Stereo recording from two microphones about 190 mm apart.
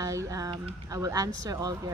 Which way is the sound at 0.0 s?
15° right (ahead or behind).